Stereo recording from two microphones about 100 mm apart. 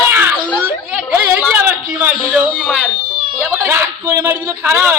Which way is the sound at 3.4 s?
25° right (ahead or behind).